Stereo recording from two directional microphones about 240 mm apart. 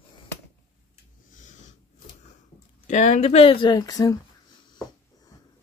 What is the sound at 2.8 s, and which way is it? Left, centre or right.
Speech, left.